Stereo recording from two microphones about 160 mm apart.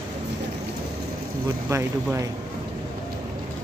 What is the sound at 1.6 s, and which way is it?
Speech, 15° right (ahead or behind).